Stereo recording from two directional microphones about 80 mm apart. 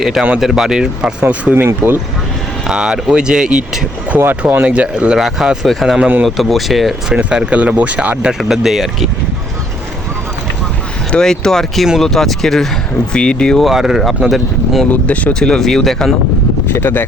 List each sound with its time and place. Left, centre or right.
0.0 s speech: centre
1.2 s speech: right
2.6 s speech: centre
4.2 s speech: right; by 6.9 s centre
7.1 s speech: centre
8.3 s speech: centre
11.1 s speech: centre
13.7 s speech: centre
14.8 s speech: centre
16.6 s speech: left